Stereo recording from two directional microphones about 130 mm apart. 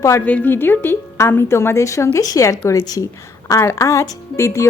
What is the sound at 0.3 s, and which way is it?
A woman's voice, 10° left (ahead or behind).